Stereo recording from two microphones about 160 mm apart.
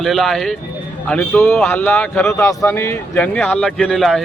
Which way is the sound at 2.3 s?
20° left (ahead or behind).